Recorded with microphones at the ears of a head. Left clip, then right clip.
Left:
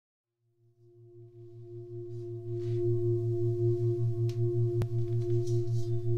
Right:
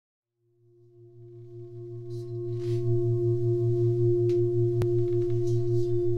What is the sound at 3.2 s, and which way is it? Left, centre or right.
Singing bowl, right.